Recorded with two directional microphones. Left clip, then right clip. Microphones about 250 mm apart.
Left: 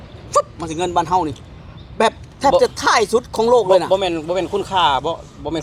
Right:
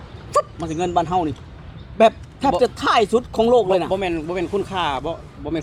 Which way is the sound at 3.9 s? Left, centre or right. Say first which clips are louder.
Left 5 dB; centre.